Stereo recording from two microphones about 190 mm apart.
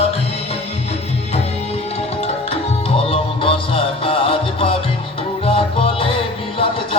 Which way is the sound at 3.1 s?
30° left (ahead or behind).